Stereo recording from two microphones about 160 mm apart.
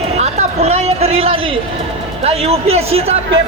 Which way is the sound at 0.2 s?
45° right (ahead or behind).